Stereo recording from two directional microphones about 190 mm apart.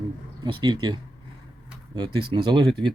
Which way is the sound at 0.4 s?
20° right (ahead or behind).